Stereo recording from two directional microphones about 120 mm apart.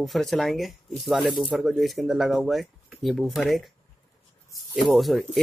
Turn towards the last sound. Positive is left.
turn(degrees=0)  # may be behind; listen again after turning